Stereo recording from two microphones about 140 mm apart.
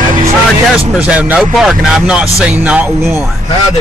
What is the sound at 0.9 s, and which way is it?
Speech, 10° right (ahead or behind).